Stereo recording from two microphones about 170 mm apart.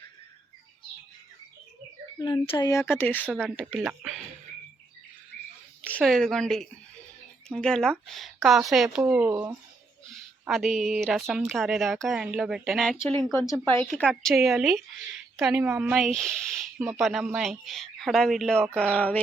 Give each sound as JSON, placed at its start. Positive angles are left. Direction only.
{"t": 2.1, "sound": "speech", "side_deg": 20}
{"t": 5.9, "sound": "speech", "side_deg": 5}
{"t": 10.4, "sound": "speech", "side_deg": 0}
{"t": 13.3, "sound": "speech", "side_deg": 20}
{"t": 14.0, "sound": "speech", "side_deg": 0}